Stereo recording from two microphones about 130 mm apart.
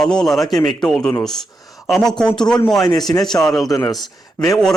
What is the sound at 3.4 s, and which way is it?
Speech, 5° left (ahead or behind).